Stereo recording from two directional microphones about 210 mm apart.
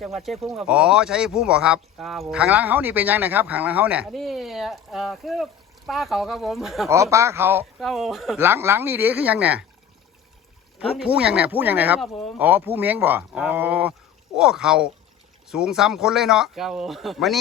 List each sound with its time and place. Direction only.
0.0 s speech: centre (ahead or behind)
6.8 s speech: 15° right (ahead or behind)
7.8 s speech: centre (ahead or behind)
8.4 s speech: 10° right (ahead or behind)
10.9 s speech: 5° right (ahead or behind)